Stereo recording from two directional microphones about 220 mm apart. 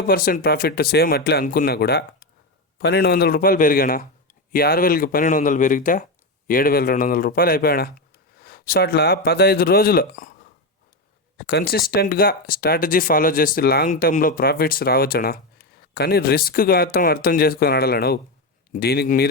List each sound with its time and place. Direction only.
0.1 s speech: 40° left (ahead or behind)
11.3 s speech: 50° left (ahead or behind)